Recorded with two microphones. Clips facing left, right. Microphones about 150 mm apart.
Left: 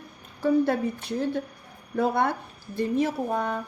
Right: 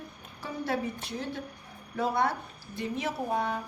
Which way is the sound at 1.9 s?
55° left (ahead or behind).